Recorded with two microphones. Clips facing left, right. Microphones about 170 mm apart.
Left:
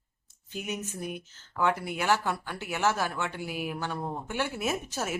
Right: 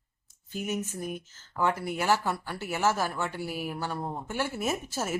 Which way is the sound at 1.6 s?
10° right (ahead or behind).